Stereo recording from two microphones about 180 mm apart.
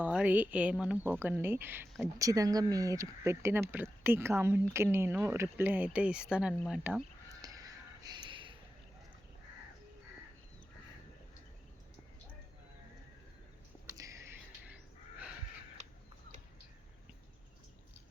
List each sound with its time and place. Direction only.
0.0 s speech: 10° right (ahead or behind)
7.3 s crow: 20° right (ahead or behind)
13.9 s a sound: 20° right (ahead or behind)